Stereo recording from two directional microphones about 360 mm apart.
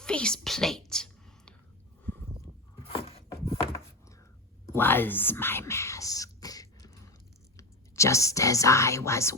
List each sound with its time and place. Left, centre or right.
0.0 s whispering: centre
2.8 s a sound: centre
4.7 s whispering: centre
7.5 s speech: centre